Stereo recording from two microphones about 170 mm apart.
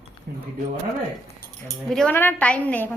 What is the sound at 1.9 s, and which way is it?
A woman's voice, 10° left (ahead or behind).